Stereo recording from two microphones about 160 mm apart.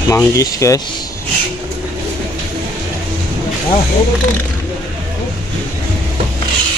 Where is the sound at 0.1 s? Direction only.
20° left (ahead or behind).